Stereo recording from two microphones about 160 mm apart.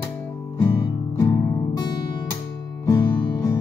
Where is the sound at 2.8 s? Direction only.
20° left (ahead or behind).